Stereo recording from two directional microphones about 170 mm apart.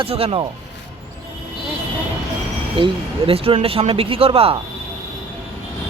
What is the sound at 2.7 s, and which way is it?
Speech, 30° right (ahead or behind).